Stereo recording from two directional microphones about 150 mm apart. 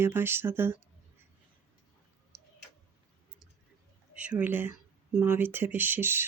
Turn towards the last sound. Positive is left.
turn(degrees=-15)  # may be behind; listen again after turning